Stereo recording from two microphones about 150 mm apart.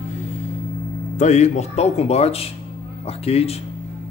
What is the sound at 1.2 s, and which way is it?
Speech, 50° left (ahead or behind).